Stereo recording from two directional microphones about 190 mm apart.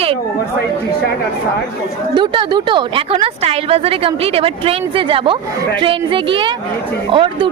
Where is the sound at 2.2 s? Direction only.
25° right (ahead or behind).